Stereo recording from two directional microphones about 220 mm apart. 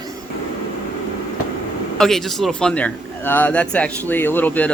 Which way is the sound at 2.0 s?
Centre (ahead or behind).